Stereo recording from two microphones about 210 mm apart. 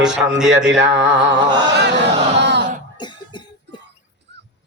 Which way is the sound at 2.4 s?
55° right (ahead or behind).